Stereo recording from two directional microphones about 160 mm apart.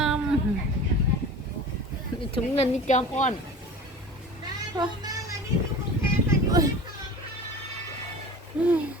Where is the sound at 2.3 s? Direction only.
45° left (ahead or behind).